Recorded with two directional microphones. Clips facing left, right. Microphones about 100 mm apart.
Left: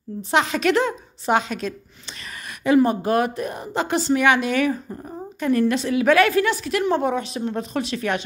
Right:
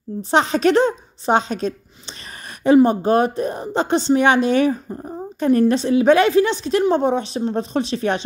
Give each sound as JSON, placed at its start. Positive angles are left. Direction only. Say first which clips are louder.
{"t": 0.3, "sound": "a woman's voice", "louder": "right 4 dB", "side_deg": -35}